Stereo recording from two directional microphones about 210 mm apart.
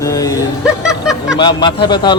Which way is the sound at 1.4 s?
20° left (ahead or behind).